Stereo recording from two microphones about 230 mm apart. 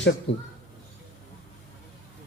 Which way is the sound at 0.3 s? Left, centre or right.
Left.